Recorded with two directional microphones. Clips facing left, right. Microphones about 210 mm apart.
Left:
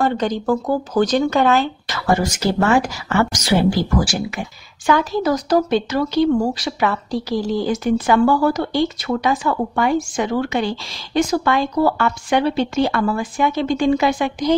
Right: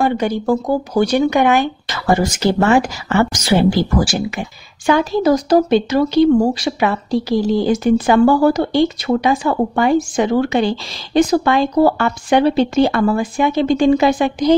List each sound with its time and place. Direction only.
0.0 s speech: 10° right (ahead or behind); by 14.5 s 35° right (ahead or behind)